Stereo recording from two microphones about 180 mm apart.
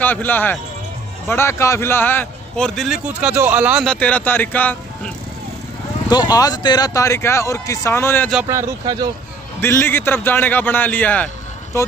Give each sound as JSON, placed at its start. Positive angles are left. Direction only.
{"t": 0.0, "sound": "speech", "side_deg": 10}
{"t": 3.8, "sound": "speech", "side_deg": 5}
{"t": 6.0, "sound": "speech", "side_deg": 20}
{"t": 8.5, "sound": "speech", "side_deg": -20}
{"t": 9.6, "sound": "speech", "side_deg": 10}